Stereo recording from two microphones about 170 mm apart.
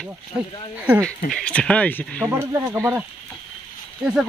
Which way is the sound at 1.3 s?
5° left (ahead or behind).